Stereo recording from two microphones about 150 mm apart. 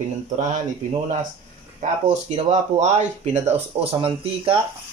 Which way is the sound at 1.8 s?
55° right (ahead or behind).